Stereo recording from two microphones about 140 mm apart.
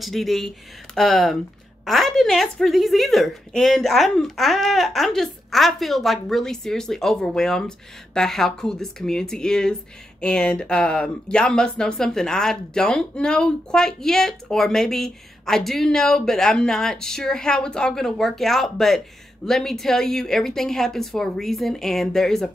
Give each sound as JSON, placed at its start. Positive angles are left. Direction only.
{"t": 0.0, "sound": "speech", "side_deg": 0}